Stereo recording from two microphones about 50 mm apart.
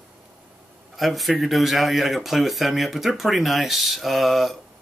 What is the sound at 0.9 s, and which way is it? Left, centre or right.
Speech, centre.